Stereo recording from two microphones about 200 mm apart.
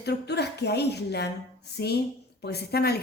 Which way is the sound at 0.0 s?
55° left (ahead or behind).